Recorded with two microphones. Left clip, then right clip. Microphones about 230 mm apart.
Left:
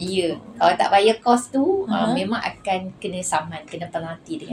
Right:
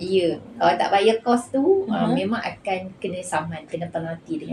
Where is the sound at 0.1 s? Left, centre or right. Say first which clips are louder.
Right 3 dB; left.